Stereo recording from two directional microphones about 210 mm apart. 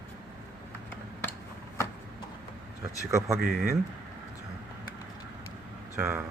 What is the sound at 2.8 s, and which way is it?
Speech, 15° right (ahead or behind).